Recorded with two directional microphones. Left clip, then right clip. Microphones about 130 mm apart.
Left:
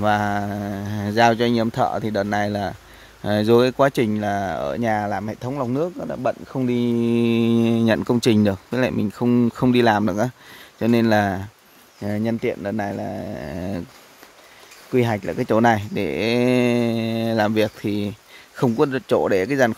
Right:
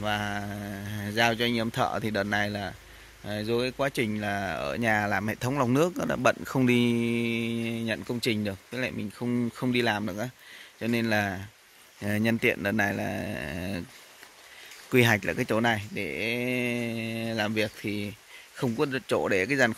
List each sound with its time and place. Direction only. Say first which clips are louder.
0.0 s speech: left 10 dB; 40° left (ahead or behind)
3.3 s speech: left 12 dB; 50° left (ahead or behind); by 5.9 s 5° right (ahead or behind)
6.5 s speech: left 2 dB; 20° right (ahead or behind)
7.0 s speech: left 9 dB; 35° left (ahead or behind)
12.0 s speech: left 2 dB; 10° left (ahead or behind)
15.0 s speech: left 2 dB; 10° left (ahead or behind)
15.4 s speech: left 9 dB; 30° left (ahead or behind)